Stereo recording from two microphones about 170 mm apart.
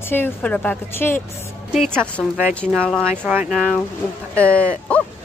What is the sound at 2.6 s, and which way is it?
Speech, 10° right (ahead or behind).